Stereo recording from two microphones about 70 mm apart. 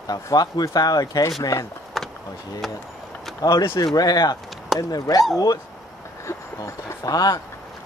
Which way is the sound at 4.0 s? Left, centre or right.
Left.